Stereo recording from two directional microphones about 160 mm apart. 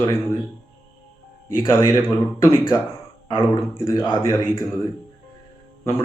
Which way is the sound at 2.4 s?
15° left (ahead or behind).